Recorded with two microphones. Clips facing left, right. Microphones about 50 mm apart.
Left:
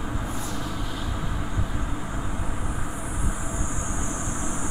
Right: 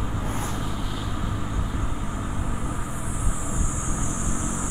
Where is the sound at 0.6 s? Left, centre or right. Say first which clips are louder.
Right 1 dB; centre.